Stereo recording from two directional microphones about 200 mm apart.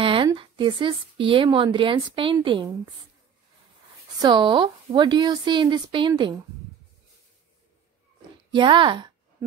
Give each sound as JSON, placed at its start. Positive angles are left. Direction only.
{"t": 0.0, "sound": "a woman's voice", "side_deg": -25}
{"t": 4.2, "sound": "speech", "side_deg": -20}
{"t": 8.5, "sound": "speech", "side_deg": -25}